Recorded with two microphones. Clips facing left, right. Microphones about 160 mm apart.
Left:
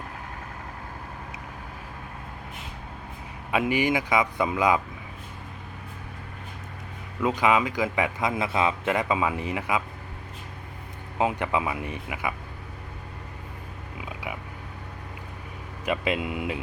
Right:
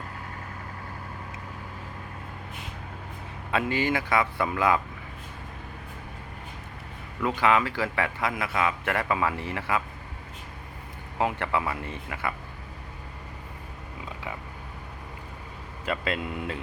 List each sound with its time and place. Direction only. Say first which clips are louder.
3.5 s a man's voice: left 2 dB; 15° left (ahead or behind)
7.2 s a man's voice: left 1 dB; 20° left (ahead or behind)
11.2 s a man's voice: left 2 dB; 20° left (ahead or behind)
14.0 s a sound: left 2 dB; 10° left (ahead or behind)
15.9 s a man's voice: left 3 dB; 15° left (ahead or behind)